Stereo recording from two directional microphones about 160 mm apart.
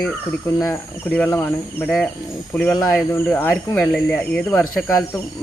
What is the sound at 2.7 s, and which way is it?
Speech, 20° left (ahead or behind).